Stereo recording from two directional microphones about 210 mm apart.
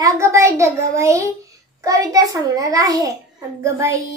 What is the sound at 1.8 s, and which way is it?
A child's voice, 15° right (ahead or behind).